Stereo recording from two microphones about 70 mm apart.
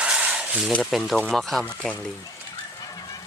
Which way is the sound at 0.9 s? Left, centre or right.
Centre.